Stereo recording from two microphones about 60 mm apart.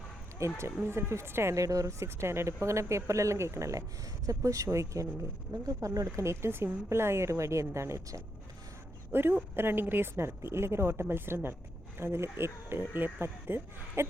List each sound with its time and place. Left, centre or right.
0.4 s a woman's voice: right
1.5 s speech: right
4.3 s speech: right
5.6 s speech: right
9.1 s a woman's voice: right